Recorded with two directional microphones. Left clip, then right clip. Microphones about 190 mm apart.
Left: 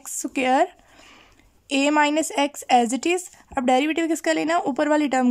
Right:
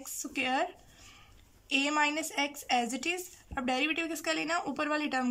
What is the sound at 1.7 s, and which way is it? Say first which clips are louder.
Speech: left 9 dB; 40° left (ahead or behind).